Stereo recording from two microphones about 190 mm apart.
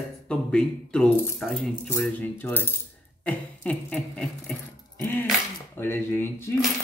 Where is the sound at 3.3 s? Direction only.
5° left (ahead or behind).